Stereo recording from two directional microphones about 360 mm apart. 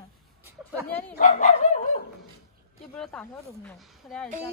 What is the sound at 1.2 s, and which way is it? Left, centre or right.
Speech, left.